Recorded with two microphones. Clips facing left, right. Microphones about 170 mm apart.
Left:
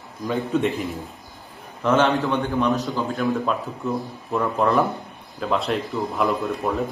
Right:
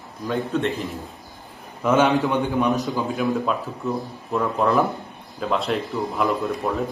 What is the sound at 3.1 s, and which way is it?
Speech, centre (ahead or behind).